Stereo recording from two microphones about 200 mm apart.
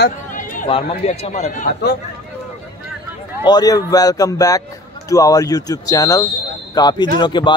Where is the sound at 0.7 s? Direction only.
35° left (ahead or behind).